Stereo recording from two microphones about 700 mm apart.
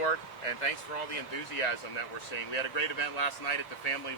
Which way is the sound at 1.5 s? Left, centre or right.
Left.